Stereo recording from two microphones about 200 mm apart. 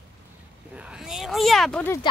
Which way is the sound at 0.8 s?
5° right (ahead or behind).